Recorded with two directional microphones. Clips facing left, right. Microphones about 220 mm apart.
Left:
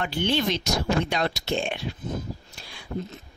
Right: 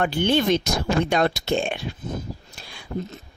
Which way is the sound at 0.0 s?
50° right (ahead or behind).